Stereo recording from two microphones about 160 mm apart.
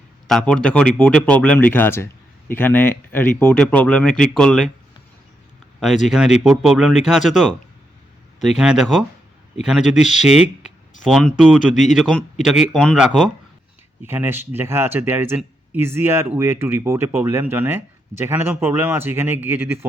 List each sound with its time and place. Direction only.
0.3 s speech: 5° left (ahead or behind)
6.1 s speech: 5° right (ahead or behind)
8.5 s speech: 5° right (ahead or behind)
11.7 s a man's voice: 50° left (ahead or behind)
12.7 s speech: centre (ahead or behind)
14.0 s speech: 15° right (ahead or behind)